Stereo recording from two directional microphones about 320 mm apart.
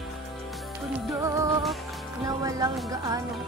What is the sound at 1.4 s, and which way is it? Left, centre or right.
Music, centre.